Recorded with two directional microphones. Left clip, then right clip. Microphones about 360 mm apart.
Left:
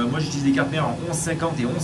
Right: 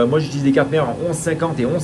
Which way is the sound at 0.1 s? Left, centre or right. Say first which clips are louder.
Right 6 dB; centre.